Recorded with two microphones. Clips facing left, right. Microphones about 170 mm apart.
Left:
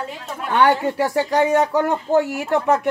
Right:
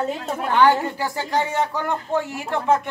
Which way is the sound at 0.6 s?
65° left (ahead or behind).